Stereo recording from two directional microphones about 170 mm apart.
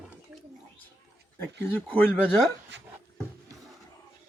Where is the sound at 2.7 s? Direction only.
90° right.